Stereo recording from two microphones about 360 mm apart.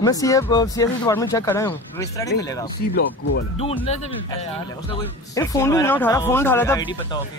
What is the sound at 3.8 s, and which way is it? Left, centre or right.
Speech, centre.